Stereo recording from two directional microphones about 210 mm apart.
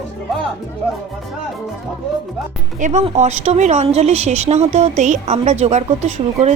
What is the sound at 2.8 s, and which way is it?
A woman's voice, 35° right (ahead or behind).